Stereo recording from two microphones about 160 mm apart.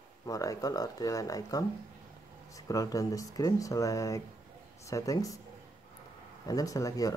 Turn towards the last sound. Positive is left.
turn(degrees=20)  # may be behind; listen again after turning